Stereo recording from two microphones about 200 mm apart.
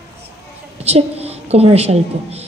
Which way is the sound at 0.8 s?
30° right (ahead or behind).